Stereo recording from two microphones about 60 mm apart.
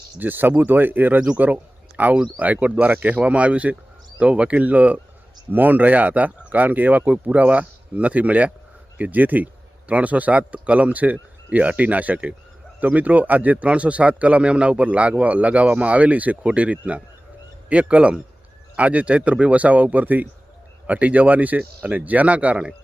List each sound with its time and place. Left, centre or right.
0.2 s a man's voice: right